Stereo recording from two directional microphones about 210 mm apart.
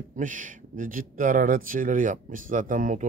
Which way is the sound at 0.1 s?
40° right (ahead or behind).